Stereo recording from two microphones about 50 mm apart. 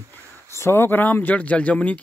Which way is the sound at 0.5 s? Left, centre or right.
Left.